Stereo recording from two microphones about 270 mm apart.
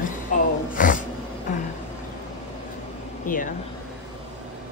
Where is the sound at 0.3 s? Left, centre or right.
Left.